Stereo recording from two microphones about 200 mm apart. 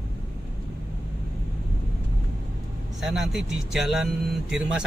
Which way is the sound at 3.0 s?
Centre (ahead or behind).